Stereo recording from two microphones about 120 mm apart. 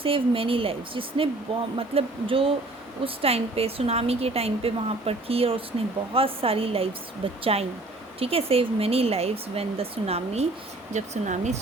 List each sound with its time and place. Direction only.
0.0 s a woman's voice: 50° right (ahead or behind)
10.9 s speech: 80° right